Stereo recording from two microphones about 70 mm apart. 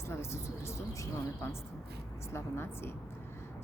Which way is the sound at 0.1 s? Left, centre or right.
Left.